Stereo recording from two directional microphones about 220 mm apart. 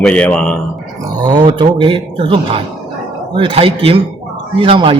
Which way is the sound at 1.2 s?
20° right (ahead or behind).